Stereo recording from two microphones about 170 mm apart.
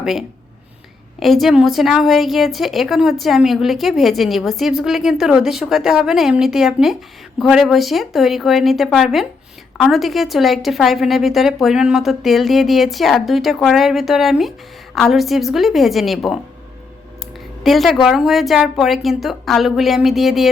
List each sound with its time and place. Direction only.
0.0 s a woman's voice: centre (ahead or behind)
17.6 s a woman's voice: centre (ahead or behind)